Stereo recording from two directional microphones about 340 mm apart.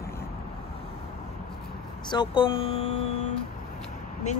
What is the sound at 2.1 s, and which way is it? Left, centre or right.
Speech, centre.